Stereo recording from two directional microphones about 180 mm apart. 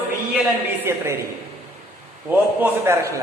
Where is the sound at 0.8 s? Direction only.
15° right (ahead or behind).